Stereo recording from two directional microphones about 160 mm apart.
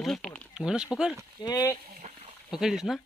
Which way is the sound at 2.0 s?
45° right (ahead or behind).